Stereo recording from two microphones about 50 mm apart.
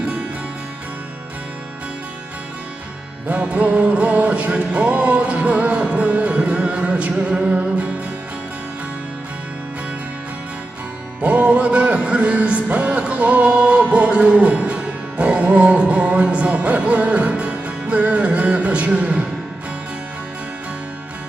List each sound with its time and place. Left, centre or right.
3.2 s music: right
11.2 s music: right